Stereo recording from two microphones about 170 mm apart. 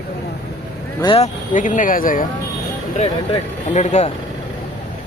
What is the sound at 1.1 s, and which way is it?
Speech, 45° left (ahead or behind).